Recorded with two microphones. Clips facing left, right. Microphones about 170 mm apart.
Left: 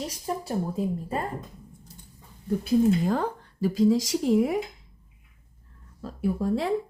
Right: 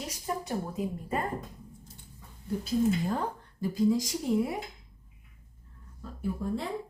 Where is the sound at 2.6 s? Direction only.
90° left.